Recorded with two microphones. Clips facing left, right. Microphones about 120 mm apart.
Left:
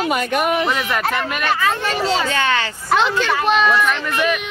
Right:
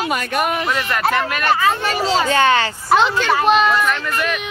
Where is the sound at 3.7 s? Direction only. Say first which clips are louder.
Even; 5° left (ahead or behind).